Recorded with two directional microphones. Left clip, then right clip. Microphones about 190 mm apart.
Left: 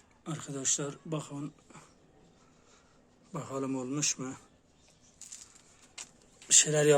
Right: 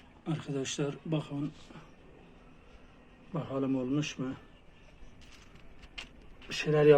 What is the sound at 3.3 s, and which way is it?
A man's voice, 20° left (ahead or behind).